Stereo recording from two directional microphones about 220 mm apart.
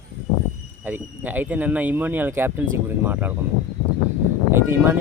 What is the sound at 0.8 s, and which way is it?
Speech, 10° right (ahead or behind).